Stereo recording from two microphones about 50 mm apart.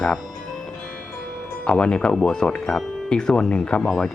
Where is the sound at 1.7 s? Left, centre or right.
Centre.